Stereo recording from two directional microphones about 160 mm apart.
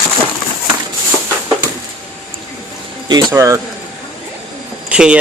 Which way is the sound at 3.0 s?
20° right (ahead or behind).